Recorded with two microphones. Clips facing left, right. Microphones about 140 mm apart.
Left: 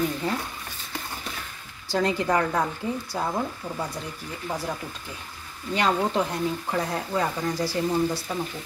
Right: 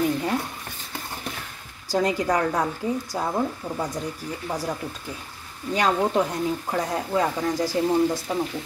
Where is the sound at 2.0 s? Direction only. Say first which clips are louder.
Right 1 dB; 15° right (ahead or behind).